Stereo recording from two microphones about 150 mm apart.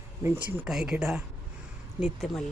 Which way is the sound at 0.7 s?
5° right (ahead or behind).